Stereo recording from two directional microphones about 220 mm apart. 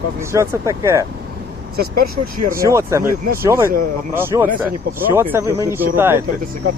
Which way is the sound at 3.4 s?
10° right (ahead or behind).